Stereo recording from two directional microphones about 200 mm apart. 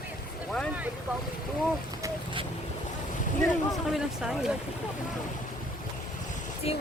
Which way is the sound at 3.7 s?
Centre (ahead or behind).